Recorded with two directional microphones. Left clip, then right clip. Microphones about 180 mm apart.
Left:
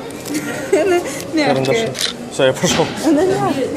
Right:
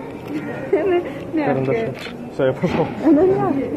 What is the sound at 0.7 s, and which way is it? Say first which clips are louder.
Speech: left 3 dB; 80° left.